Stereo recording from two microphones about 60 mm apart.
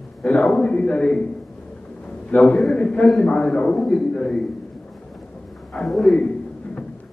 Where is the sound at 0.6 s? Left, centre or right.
Left.